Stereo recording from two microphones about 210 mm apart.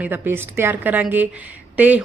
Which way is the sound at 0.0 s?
10° right (ahead or behind).